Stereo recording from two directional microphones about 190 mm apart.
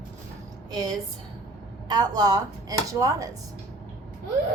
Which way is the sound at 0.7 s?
20° right (ahead or behind).